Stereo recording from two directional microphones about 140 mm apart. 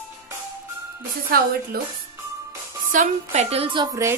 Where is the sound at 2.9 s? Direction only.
70° right (ahead or behind).